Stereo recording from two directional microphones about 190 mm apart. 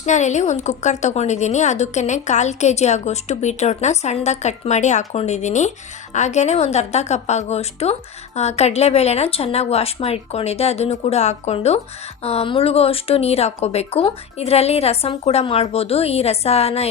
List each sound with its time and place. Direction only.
0.0 s a woman's voice: 40° left (ahead or behind)